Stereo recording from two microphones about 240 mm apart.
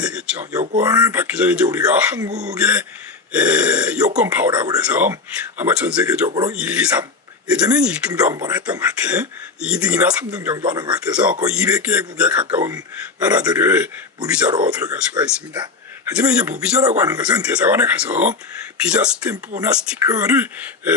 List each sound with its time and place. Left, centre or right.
0.0 s a sound: centre
0.8 s speech: centre
2.3 s speech: right
2.6 s speech: centre
14.5 s speech: centre